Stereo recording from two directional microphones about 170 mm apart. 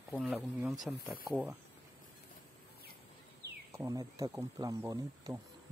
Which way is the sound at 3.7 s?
15° right (ahead or behind).